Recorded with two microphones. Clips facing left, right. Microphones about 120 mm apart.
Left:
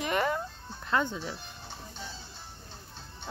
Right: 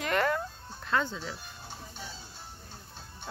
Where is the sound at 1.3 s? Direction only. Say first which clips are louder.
Left 1 dB; 10° right (ahead or behind).